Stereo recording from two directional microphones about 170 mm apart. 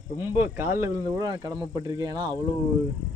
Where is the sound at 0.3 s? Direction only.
10° right (ahead or behind).